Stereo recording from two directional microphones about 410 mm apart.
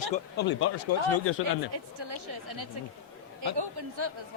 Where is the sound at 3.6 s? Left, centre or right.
Right.